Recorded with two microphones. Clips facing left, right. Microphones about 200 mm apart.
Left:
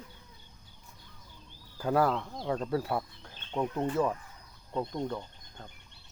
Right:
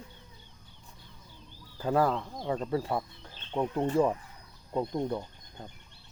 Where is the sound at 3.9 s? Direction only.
20° right (ahead or behind).